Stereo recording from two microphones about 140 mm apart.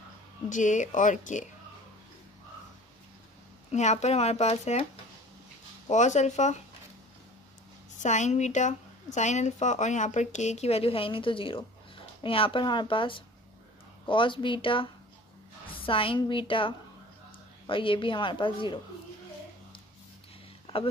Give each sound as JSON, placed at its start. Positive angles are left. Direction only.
{"t": 0.5, "sound": "speech", "side_deg": 65}
{"t": 3.7, "sound": "speech", "side_deg": 55}
{"t": 5.9, "sound": "speech", "side_deg": 55}
{"t": 8.0, "sound": "a woman's voice", "side_deg": 55}